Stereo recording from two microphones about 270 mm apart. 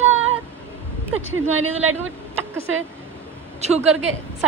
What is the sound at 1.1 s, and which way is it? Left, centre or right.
Speech, right.